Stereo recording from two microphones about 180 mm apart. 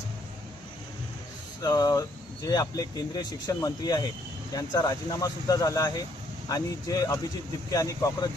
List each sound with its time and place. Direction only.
1.6 s speech: 20° left (ahead or behind)